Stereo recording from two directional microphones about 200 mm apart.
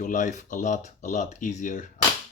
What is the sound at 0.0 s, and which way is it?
Speech, 40° left (ahead or behind).